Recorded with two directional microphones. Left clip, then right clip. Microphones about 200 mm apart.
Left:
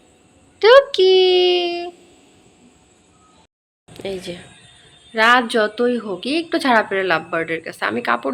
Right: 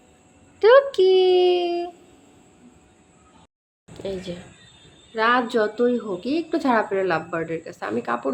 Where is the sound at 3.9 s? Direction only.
20° left (ahead or behind).